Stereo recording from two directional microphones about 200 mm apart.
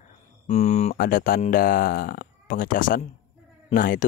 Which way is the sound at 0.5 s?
35° left (ahead or behind).